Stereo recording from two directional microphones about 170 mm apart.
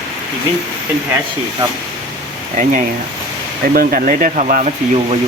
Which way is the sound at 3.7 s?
55° right (ahead or behind).